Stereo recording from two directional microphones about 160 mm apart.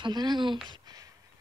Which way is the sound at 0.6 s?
25° right (ahead or behind).